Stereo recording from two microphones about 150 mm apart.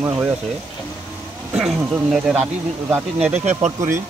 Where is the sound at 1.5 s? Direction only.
Centre (ahead or behind).